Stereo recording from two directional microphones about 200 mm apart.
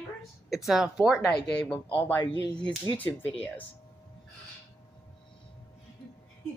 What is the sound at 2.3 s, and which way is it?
Speech, 25° right (ahead or behind).